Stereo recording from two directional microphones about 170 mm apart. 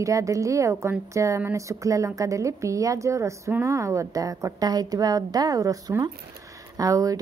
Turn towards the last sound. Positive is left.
turn(degrees=-20)  # may be behind; listen again after turning